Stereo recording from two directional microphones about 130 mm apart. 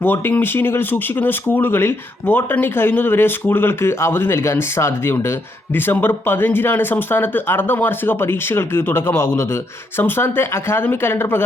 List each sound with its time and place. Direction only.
0.0 s speech: 15° left (ahead or behind)